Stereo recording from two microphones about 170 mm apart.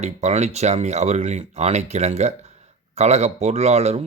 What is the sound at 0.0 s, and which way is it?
Speech, 40° right (ahead or behind).